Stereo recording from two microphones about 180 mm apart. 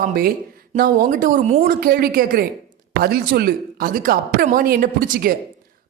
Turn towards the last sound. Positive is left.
turn(degrees=-50)  # may be behind; listen again after turning